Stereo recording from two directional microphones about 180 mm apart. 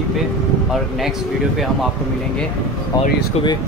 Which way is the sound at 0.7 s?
Centre (ahead or behind).